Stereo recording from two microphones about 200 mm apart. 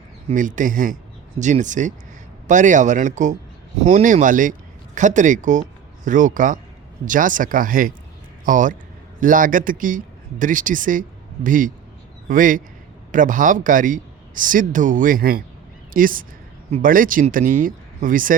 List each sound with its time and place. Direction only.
0.3 s a man's voice: 40° right (ahead or behind)